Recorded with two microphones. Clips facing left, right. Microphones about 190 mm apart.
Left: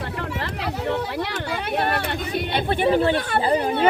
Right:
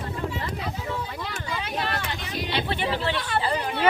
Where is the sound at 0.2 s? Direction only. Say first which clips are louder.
Left 2 dB; 70° left (ahead or behind).